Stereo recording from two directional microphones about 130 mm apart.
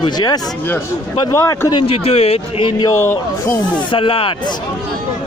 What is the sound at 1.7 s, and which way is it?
A man's voice, 45° left (ahead or behind).